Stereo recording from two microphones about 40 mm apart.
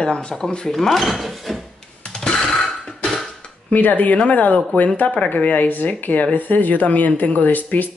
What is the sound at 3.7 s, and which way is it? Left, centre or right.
Speech, left.